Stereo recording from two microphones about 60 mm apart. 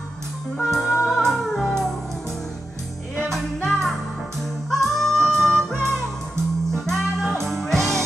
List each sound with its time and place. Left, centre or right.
0.7 s music: centre
3.3 s music: centre